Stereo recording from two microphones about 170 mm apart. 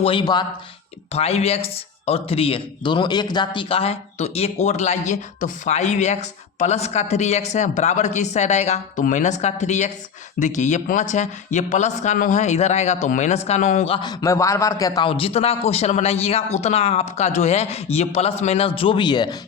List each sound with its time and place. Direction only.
0.0 s speech: 30° left (ahead or behind)
1.1 s a man's voice: 40° left (ahead or behind)
13.9 s a man's voice: 25° left (ahead or behind)